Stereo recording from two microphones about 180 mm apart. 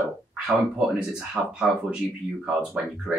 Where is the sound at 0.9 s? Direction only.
5° right (ahead or behind).